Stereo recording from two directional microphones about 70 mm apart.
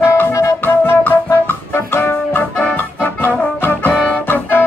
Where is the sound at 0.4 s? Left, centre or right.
Left.